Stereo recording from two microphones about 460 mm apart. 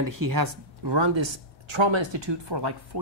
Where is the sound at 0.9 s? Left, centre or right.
Right.